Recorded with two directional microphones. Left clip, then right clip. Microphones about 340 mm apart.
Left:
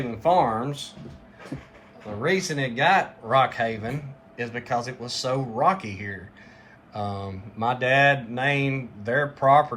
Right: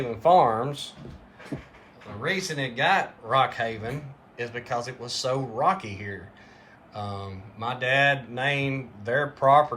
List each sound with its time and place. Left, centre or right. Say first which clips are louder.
0.1 s speech: right 2 dB; centre
2.2 s speech: left 3 dB; centre